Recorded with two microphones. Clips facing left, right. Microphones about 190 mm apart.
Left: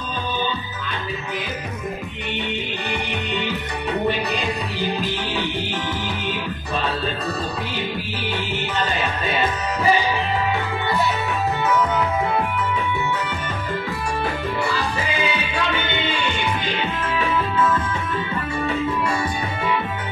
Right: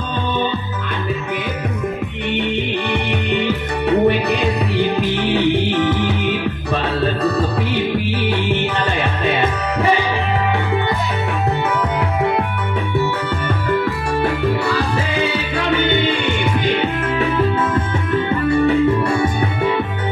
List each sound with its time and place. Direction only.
3.1 s music: 60° right (ahead or behind)
16.6 s music: 60° right (ahead or behind)
19.0 s music: 60° right (ahead or behind)